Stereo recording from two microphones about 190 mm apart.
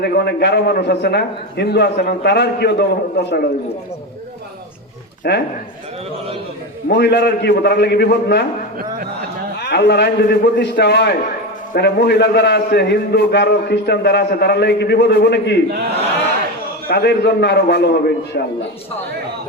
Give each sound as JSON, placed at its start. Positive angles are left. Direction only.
{"t": 0.0, "sound": "a man's voice", "side_deg": 60}
{"t": 5.2, "sound": "a man's voice", "side_deg": 55}
{"t": 6.8, "sound": "a man's voice", "side_deg": 60}
{"t": 9.6, "sound": "a man's voice", "side_deg": 60}
{"t": 16.9, "sound": "a man's voice", "side_deg": 60}